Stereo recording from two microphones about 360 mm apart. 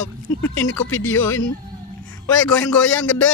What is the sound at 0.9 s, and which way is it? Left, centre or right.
Speech, left.